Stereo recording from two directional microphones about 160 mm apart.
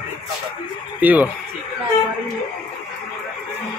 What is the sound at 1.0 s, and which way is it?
Speech, 10° right (ahead or behind).